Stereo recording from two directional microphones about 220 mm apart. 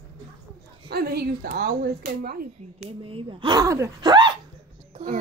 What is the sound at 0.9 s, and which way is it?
Speech, 45° right (ahead or behind).